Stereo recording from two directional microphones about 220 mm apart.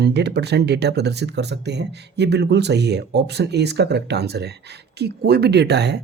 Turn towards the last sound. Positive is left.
turn(degrees=-50)  # may be behind; listen again after turning